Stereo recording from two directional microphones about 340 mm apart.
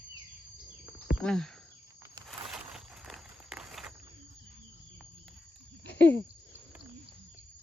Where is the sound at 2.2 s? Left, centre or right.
Centre.